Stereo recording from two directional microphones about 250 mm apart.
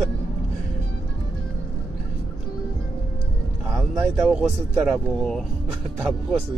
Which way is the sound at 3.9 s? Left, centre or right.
Centre.